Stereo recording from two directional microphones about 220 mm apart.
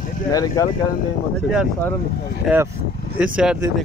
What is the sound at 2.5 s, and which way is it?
Speech, centre (ahead or behind).